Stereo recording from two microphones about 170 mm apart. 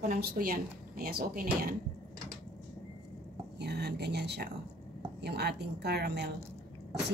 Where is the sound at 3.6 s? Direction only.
75° right (ahead or behind).